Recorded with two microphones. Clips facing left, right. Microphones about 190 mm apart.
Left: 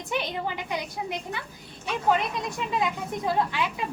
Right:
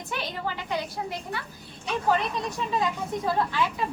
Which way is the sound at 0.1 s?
20° left (ahead or behind).